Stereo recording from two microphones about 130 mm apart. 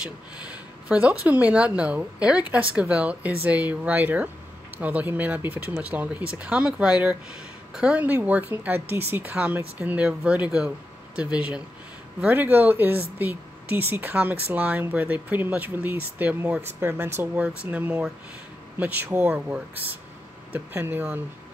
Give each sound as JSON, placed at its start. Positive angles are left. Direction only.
{"t": 0.0, "sound": "speech", "side_deg": -10}